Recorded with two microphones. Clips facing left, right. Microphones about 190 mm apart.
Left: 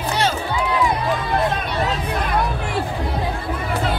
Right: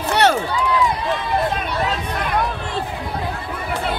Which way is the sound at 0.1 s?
70° right (ahead or behind).